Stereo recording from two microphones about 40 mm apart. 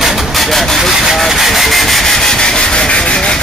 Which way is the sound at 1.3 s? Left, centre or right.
Centre.